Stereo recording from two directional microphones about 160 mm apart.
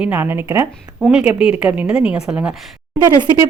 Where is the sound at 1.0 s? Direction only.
5° right (ahead or behind).